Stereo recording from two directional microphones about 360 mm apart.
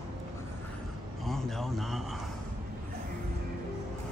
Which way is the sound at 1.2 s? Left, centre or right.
Centre.